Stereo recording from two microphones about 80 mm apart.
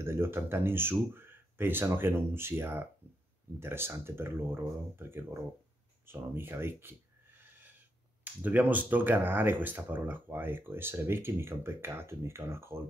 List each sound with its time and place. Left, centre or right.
0.0 s speech: right
6.6 s a sound: right
8.2 s speech: right